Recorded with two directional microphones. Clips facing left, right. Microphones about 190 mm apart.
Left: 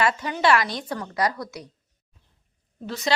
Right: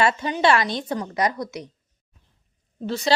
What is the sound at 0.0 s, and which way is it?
A woman's voice, 25° right (ahead or behind).